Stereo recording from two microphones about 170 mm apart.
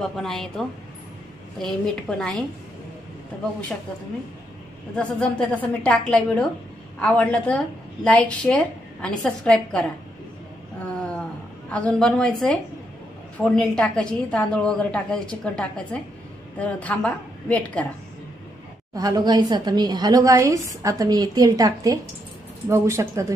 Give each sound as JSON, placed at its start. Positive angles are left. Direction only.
{"t": 0.0, "sound": "a woman's voice", "side_deg": 0}
{"t": 4.9, "sound": "a woman's voice", "side_deg": 5}
{"t": 11.0, "sound": "a sound", "side_deg": 5}
{"t": 11.7, "sound": "a woman's voice", "side_deg": 5}
{"t": 18.9, "sound": "a woman's voice", "side_deg": -20}